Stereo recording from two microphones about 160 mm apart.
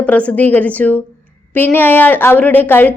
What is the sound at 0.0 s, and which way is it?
A woman's voice, 10° left (ahead or behind).